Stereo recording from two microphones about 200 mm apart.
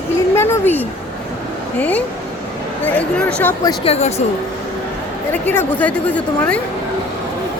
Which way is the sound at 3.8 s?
30° left (ahead or behind).